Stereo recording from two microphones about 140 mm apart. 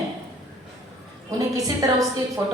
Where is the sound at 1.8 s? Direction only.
25° right (ahead or behind).